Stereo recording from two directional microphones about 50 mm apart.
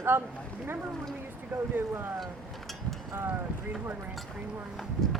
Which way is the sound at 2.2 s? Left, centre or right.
Centre.